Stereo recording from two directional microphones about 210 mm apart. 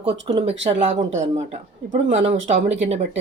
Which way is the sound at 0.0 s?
25° right (ahead or behind).